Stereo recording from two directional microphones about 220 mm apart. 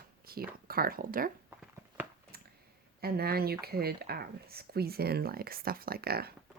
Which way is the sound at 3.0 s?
45° right (ahead or behind).